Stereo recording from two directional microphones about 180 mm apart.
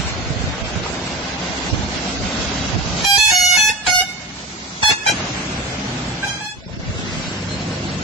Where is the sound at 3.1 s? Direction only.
Centre (ahead or behind).